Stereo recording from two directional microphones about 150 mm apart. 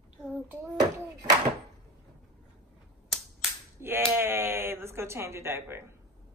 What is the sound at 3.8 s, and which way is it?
Speech, 15° right (ahead or behind).